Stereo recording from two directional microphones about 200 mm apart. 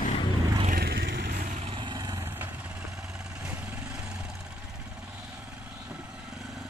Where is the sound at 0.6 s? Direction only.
50° right (ahead or behind).